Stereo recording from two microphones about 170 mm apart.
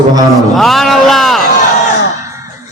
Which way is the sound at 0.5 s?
Centre (ahead or behind).